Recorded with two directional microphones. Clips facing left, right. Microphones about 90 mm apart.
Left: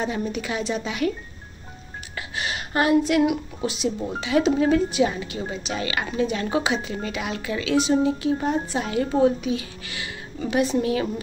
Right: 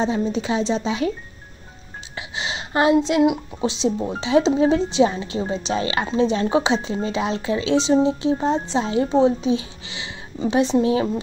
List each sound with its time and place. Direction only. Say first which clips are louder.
0.0 s a woman's voice: right 5 dB; 30° right (ahead or behind)
2.1 s a woman's voice: right 1 dB; 20° right (ahead or behind)